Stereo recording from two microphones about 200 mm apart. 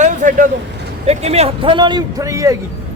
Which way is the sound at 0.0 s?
40° right (ahead or behind).